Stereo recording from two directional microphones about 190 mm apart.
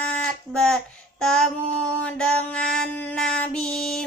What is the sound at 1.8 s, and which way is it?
Female singing, 5° left (ahead or behind).